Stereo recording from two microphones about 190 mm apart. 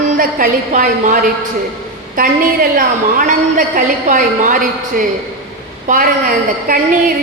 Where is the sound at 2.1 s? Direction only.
50° right (ahead or behind).